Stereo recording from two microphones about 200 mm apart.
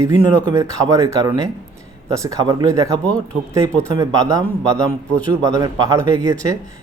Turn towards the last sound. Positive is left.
turn(degrees=-15)  # may be behind; listen again after turning